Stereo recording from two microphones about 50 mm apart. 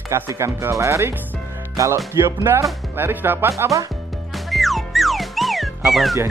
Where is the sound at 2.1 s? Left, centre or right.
Right.